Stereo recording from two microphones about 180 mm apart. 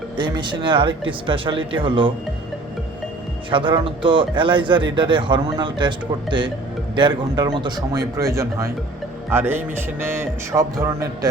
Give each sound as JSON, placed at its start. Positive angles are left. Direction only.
{"t": 0.2, "sound": "speech", "side_deg": -25}
{"t": 3.5, "sound": "speech", "side_deg": -30}
{"t": 6.9, "sound": "speech", "side_deg": -25}